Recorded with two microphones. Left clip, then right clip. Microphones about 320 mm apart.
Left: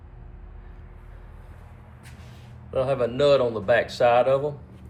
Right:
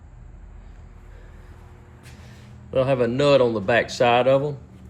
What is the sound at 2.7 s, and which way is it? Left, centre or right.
Speech, right.